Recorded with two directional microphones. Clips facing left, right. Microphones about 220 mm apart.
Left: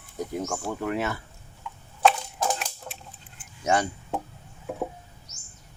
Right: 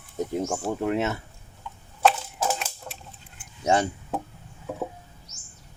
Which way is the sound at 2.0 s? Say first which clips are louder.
Even; 5° right (ahead or behind).